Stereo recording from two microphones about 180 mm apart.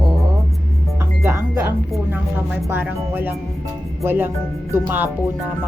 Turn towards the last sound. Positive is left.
turn(degrees=-10)  # may be behind; listen again after turning